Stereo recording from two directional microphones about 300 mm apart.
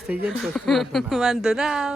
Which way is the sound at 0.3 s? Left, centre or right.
Centre.